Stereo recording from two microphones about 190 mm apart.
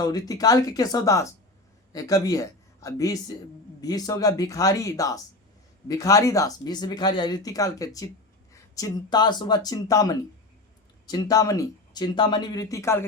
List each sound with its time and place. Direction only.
0.0 s speech: 20° left (ahead or behind)